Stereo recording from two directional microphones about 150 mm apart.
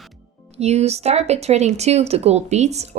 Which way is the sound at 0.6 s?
45° right (ahead or behind).